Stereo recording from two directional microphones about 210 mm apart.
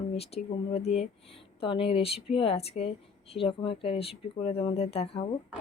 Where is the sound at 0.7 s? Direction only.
30° left (ahead or behind).